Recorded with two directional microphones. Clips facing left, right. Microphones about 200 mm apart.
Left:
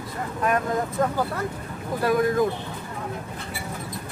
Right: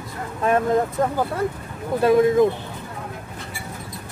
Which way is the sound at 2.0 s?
25° right (ahead or behind).